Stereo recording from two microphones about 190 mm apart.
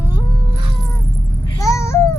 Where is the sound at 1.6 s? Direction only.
15° left (ahead or behind).